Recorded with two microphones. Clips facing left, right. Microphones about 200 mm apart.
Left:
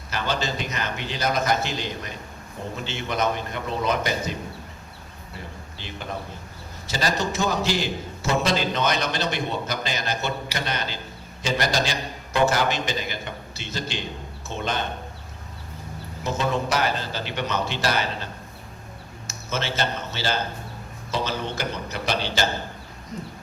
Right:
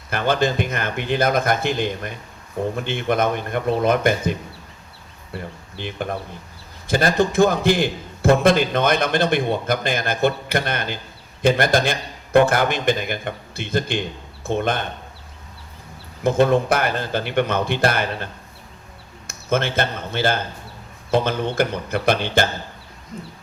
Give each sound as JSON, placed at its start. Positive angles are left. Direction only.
{"t": 0.1, "sound": "a man's voice", "side_deg": -55}
{"t": 16.2, "sound": "a man's voice", "side_deg": -55}
{"t": 19.3, "sound": "a man's voice", "side_deg": -55}